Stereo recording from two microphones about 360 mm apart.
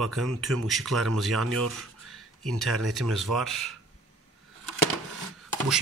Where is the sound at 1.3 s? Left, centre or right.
Right.